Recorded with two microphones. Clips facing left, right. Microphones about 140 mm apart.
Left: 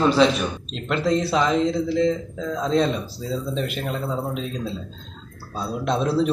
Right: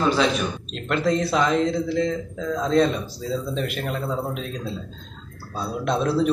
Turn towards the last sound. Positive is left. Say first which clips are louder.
# even
turn(degrees=0)  # may be behind; listen again after turning